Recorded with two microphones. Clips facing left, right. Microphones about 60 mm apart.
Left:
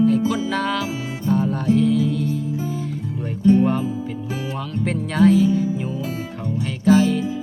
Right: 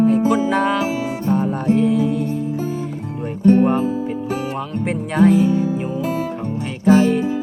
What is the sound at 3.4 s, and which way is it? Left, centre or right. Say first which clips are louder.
Music: right 2 dB; right.